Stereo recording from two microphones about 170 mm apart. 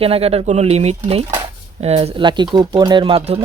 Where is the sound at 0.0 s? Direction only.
35° right (ahead or behind).